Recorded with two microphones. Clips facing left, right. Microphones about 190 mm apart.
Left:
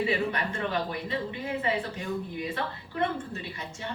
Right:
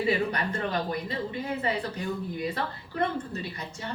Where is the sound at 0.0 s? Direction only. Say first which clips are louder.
Right 1 dB; 40° right (ahead or behind).